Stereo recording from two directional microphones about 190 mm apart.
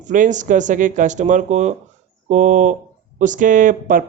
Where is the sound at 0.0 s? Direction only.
40° right (ahead or behind).